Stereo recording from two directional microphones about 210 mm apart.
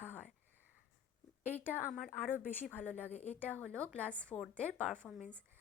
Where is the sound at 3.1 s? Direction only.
30° left (ahead or behind).